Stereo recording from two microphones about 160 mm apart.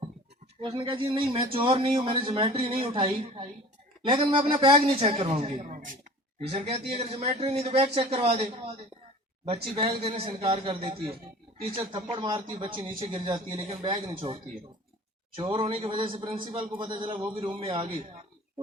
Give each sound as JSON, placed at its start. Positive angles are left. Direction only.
{"t": 0.6, "sound": "a man's voice", "side_deg": -30}
{"t": 5.6, "sound": "speech", "side_deg": -55}
{"t": 6.5, "sound": "a man's voice", "side_deg": -40}
{"t": 9.7, "sound": "a man's voice", "side_deg": -35}
{"t": 15.4, "sound": "a man's voice", "side_deg": -30}